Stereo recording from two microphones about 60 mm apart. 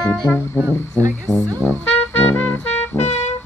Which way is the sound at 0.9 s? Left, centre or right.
Right.